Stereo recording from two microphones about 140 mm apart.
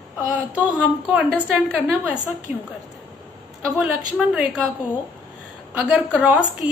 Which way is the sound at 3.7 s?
5° right (ahead or behind).